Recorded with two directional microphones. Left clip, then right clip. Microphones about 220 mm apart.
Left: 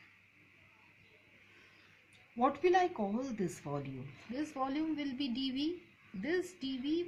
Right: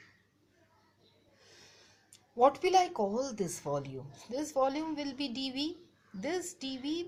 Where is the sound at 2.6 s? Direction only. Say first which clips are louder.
Right 3 dB; 30° right (ahead or behind).